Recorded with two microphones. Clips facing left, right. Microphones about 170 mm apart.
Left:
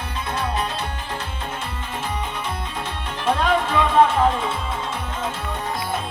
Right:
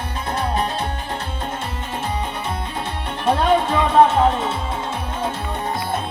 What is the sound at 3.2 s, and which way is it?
Music, 30° right (ahead or behind).